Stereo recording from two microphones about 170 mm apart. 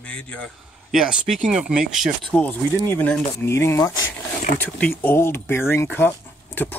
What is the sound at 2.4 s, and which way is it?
Speech, 10° left (ahead or behind).